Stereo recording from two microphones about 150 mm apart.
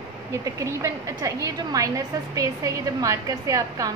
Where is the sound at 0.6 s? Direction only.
20° right (ahead or behind).